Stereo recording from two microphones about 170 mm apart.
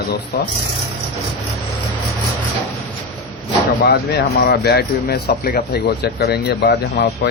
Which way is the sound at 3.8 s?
70° left (ahead or behind).